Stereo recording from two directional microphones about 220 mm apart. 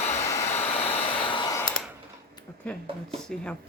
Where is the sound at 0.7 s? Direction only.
25° left (ahead or behind).